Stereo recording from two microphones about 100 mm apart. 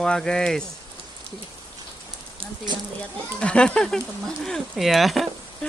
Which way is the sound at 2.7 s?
50° right (ahead or behind).